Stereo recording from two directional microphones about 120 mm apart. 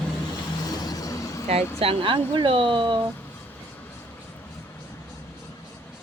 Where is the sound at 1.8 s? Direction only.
50° right (ahead or behind).